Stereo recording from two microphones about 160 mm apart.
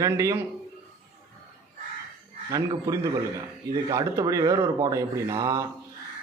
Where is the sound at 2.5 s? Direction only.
20° right (ahead or behind).